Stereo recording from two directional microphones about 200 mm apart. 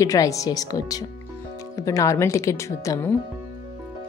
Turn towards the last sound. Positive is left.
turn(degrees=15)  # may be behind; listen again after turning